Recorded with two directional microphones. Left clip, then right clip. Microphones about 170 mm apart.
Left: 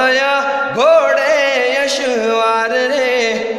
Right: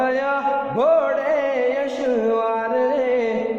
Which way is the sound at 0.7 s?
15° left (ahead or behind).